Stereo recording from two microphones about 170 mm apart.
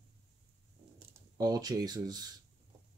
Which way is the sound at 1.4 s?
25° right (ahead or behind).